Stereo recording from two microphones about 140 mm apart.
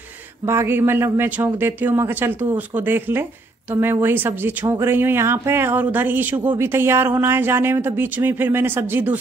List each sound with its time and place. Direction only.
0.5 s speech: 15° right (ahead or behind)